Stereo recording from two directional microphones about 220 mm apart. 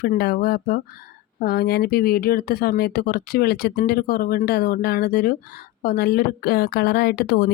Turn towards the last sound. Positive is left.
turn(degrees=45)  # may be behind; listen again after turning